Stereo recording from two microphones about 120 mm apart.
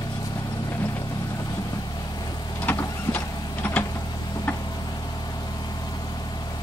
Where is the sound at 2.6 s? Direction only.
15° left (ahead or behind).